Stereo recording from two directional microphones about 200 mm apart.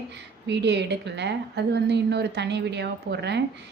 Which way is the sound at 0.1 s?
60° right (ahead or behind).